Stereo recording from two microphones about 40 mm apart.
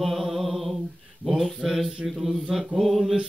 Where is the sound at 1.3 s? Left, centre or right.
Centre.